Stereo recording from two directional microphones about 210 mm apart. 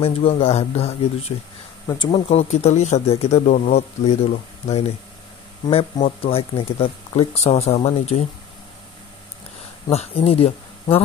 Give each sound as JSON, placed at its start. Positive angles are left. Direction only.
{"t": 0.0, "sound": "speech", "side_deg": 25}
{"t": 9.8, "sound": "speech", "side_deg": 30}